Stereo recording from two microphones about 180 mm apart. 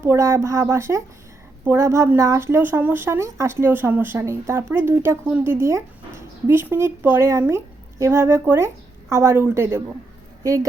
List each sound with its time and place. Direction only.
0.0 s speech: 15° right (ahead or behind)